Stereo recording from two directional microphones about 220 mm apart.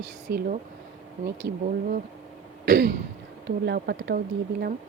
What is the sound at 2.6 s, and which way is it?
Throat clearing, 40° right (ahead or behind).